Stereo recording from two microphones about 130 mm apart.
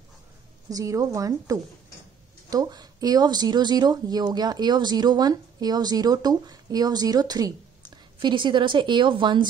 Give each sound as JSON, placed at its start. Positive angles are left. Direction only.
{"t": 0.7, "sound": "speech", "side_deg": -25}